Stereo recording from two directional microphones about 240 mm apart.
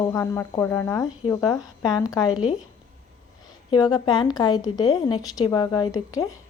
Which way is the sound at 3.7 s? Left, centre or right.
Centre.